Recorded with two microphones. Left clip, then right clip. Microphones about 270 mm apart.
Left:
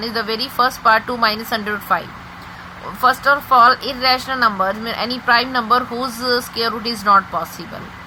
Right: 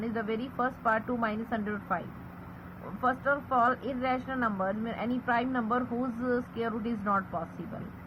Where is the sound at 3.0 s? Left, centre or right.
Left.